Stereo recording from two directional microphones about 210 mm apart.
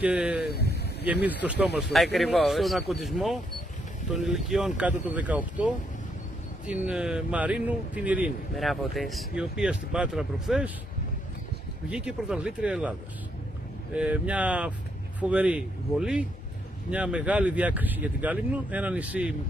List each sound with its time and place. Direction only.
0.0 s a sound: 5° right (ahead or behind)
0.5 s a sound: 50° left (ahead or behind)
1.2 s speech: 5° right (ahead or behind)
6.7 s speech: 5° right (ahead or behind)
11.9 s speech: 5° right (ahead or behind)
13.9 s speech: 5° right (ahead or behind)